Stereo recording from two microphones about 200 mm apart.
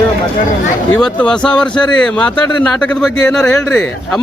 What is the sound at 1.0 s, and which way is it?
A man's voice, 5° left (ahead or behind).